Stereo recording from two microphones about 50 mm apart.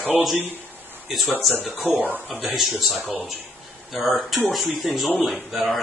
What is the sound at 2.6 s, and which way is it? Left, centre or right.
Speech, centre.